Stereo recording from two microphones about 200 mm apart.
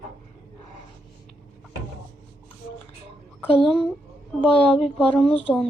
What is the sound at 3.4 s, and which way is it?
Speech, 30° left (ahead or behind).